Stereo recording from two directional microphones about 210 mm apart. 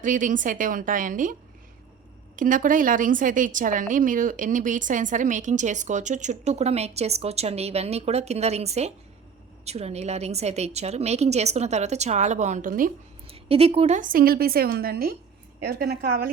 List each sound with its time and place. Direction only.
0.0 s a woman's voice: 40° right (ahead or behind)
13.2 s a woman's voice: 30° right (ahead or behind); by 16.3 s 50° right (ahead or behind)